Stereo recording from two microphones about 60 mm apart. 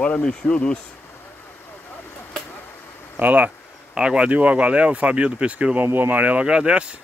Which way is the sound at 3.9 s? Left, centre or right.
Centre.